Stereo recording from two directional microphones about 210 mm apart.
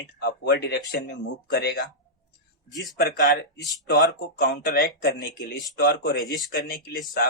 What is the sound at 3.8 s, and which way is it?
Speech, 50° left (ahead or behind).